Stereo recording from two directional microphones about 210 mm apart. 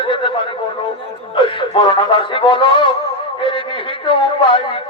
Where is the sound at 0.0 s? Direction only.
25° left (ahead or behind).